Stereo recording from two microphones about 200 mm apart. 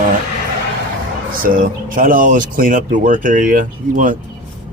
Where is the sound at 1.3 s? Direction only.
45° right (ahead or behind).